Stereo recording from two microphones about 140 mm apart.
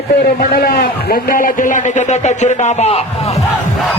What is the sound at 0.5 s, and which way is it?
A man's voice, 90° left.